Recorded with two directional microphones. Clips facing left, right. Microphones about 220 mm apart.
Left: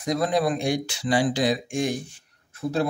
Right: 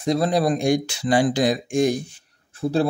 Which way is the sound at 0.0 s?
30° right (ahead or behind).